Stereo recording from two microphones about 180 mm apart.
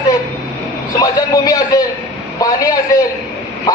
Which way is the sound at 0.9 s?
20° left (ahead or behind).